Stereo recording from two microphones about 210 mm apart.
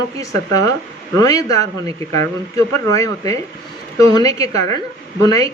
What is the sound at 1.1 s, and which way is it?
Speech, 15° left (ahead or behind).